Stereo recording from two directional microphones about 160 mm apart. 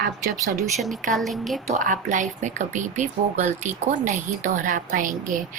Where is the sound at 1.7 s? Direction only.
55° right (ahead or behind).